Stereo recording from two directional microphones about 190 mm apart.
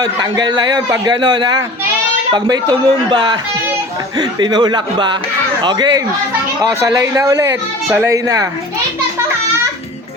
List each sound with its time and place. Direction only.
0.0 s a man's voice: 20° right (ahead or behind)